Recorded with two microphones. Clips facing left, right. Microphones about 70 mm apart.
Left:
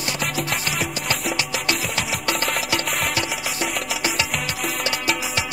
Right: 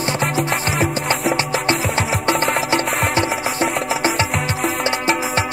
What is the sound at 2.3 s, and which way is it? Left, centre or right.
Music, right.